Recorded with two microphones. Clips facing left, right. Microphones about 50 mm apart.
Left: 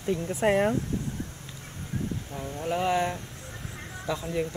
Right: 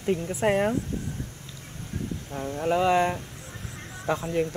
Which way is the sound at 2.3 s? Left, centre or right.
Centre.